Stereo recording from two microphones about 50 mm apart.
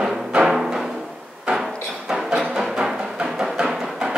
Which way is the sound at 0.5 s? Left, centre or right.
Centre.